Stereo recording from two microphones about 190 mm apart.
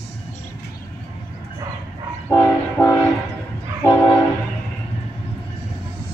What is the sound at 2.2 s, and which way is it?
Train, 10° left (ahead or behind).